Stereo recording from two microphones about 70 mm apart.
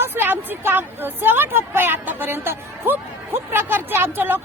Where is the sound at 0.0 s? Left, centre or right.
Right.